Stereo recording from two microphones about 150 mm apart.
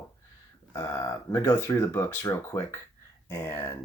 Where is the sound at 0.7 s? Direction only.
20° left (ahead or behind).